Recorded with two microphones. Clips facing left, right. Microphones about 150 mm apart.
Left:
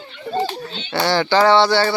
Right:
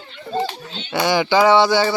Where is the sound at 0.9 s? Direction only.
15° right (ahead or behind).